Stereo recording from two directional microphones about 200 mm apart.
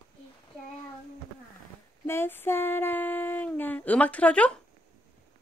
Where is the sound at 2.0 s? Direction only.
10° left (ahead or behind).